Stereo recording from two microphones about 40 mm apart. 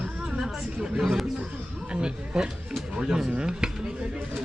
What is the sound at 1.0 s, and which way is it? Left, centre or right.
Speech, centre.